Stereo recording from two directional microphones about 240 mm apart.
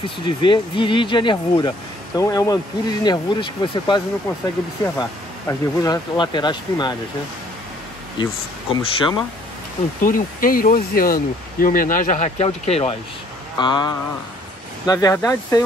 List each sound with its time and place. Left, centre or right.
0.0 s speech: left
5.5 s speech: centre
8.7 s speech: centre
10.0 s speech: left; by 15.6 s centre